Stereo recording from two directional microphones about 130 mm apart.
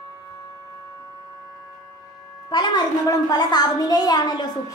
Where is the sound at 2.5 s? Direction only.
35° left (ahead or behind).